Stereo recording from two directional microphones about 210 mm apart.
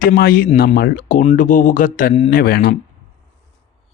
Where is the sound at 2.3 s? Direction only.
45° left (ahead or behind).